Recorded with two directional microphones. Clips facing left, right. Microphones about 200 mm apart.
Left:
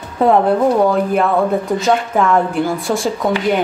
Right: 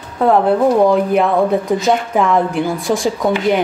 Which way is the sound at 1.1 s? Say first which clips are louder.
Right 1 dB; centre (ahead or behind).